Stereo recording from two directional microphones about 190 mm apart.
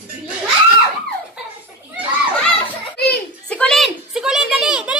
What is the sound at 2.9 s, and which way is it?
Children playing, 55° left (ahead or behind).